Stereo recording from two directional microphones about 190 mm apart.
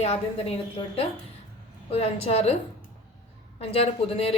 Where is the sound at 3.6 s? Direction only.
30° left (ahead or behind).